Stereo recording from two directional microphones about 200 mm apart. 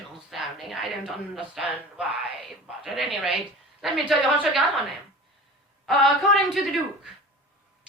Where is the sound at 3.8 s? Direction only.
Centre (ahead or behind).